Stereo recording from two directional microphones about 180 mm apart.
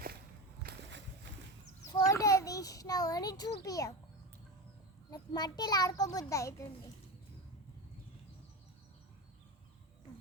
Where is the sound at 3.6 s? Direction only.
20° left (ahead or behind).